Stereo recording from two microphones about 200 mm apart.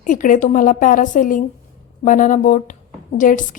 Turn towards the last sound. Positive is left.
turn(degrees=40)  # may be behind; listen again after turning